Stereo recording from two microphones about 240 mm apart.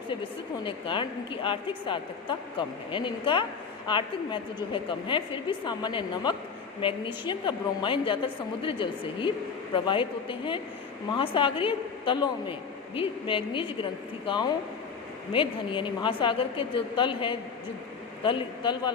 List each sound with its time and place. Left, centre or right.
0.6 s a woman's voice: left